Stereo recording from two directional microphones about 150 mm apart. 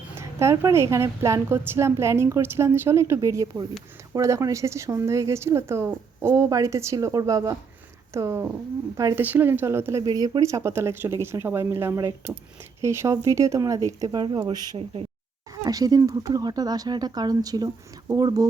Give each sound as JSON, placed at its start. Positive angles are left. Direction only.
{"t": 0.2, "sound": "a woman's voice", "side_deg": -20}